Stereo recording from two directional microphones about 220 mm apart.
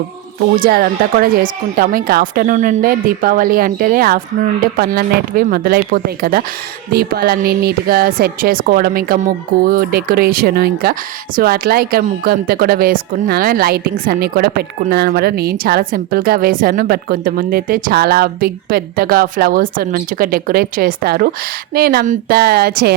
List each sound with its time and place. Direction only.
0.5 s speech: 40° right (ahead or behind)